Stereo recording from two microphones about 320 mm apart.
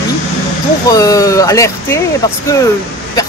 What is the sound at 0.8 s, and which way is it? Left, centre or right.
Speech, centre.